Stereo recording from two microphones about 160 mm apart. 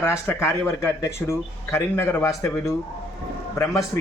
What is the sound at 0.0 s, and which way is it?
Speech, 15° left (ahead or behind).